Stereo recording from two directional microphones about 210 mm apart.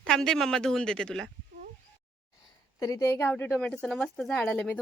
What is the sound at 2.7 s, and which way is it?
Speech, 15° left (ahead or behind).